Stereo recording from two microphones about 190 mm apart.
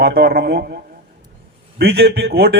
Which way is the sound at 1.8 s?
55° right (ahead or behind).